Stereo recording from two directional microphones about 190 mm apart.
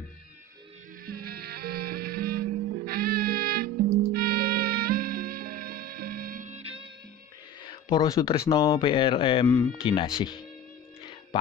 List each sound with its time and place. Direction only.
1.0 s music: 55° right (ahead or behind); by 6.9 s 30° right (ahead or behind)
7.6 s speech: 20° left (ahead or behind)